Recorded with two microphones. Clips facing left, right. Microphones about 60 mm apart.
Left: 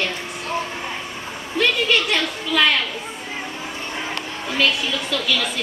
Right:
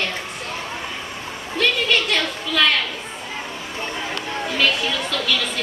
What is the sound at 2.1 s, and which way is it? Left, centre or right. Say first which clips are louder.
Speech: left 1 dB; centre.